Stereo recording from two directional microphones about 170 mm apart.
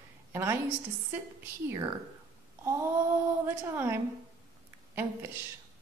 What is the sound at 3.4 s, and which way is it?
A woman's voice, 15° right (ahead or behind).